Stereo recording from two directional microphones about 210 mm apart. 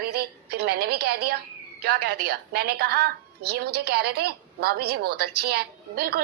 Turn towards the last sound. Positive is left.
turn(degrees=-50)  # may be behind; listen again after turning